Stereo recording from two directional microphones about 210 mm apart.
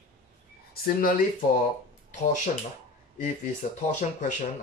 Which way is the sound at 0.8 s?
40° left (ahead or behind).